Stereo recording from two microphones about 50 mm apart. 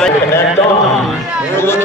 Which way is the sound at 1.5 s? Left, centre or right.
Left.